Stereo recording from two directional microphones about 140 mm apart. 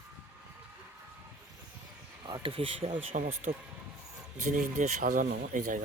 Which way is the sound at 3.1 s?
55° right (ahead or behind).